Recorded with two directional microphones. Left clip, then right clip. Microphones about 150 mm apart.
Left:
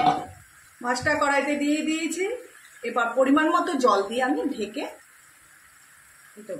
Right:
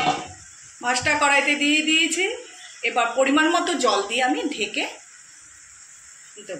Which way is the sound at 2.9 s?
45° left (ahead or behind).